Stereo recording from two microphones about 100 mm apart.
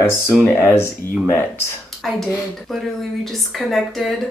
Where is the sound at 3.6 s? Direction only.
Centre (ahead or behind).